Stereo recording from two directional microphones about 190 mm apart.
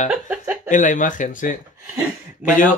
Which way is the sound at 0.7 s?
40° left (ahead or behind).